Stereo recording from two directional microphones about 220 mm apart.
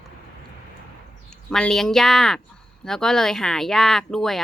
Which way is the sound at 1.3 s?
5° left (ahead or behind).